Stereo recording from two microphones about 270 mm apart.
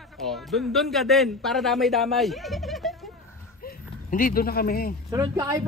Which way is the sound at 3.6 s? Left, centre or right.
Left.